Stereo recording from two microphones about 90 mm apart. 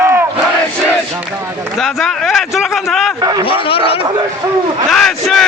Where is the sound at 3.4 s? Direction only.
85° left.